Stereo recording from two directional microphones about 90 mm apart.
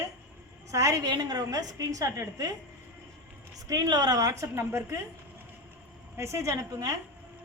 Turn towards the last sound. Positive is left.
turn(degrees=-40)  # may be behind; listen again after turning